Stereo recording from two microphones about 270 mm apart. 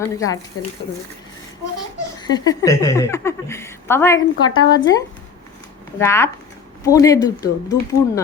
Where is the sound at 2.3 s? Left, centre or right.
Centre.